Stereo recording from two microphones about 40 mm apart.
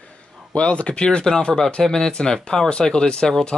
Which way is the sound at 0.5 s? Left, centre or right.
Left.